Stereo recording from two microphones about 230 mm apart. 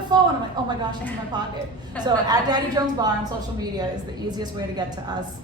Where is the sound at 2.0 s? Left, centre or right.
Centre.